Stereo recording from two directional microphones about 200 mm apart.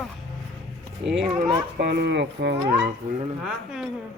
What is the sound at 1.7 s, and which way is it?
Speech, 55° right (ahead or behind).